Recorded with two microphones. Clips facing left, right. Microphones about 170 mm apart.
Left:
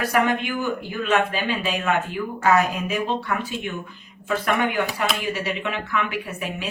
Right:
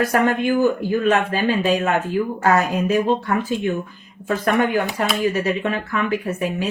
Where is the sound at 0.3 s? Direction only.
40° right (ahead or behind).